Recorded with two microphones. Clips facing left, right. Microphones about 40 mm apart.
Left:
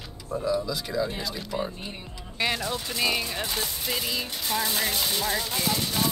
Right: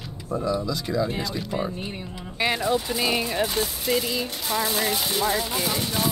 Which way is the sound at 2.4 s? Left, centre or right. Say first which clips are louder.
Right 5 dB; centre.